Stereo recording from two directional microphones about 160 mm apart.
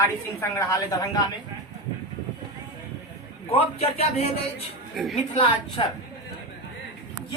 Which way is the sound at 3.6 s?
40° left (ahead or behind).